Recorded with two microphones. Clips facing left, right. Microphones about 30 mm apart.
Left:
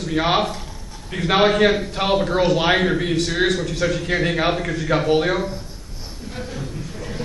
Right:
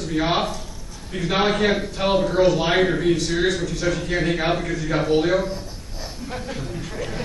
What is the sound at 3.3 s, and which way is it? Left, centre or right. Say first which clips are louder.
Speech: left 1 dB; left.